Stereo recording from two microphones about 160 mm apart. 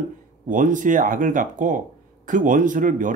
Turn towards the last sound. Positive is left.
turn(degrees=-55)  # may be behind; listen again after turning